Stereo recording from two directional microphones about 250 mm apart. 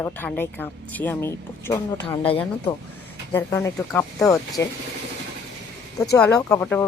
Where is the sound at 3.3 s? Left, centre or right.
Centre.